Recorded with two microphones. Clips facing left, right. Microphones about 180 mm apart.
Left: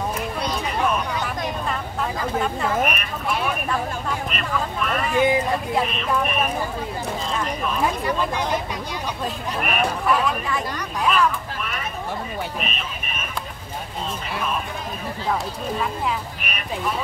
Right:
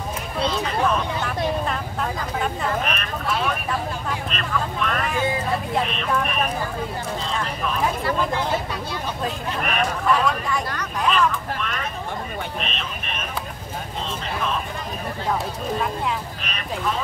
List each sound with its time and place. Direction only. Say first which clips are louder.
1.7 s a sound: even; centre (ahead or behind)
4.3 s speech: even; 5° left (ahead or behind)
5.1 s speech: left 9 dB; 15° left (ahead or behind)
8.0 s speech: even; 15° left (ahead or behind)
16.4 s frog: left 1 dB; 10° left (ahead or behind)